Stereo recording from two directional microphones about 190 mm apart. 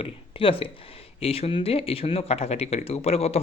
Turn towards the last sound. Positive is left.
turn(degrees=35)  # may be behind; listen again after turning